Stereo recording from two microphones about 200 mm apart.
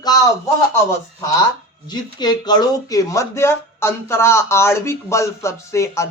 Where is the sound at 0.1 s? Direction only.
20° left (ahead or behind).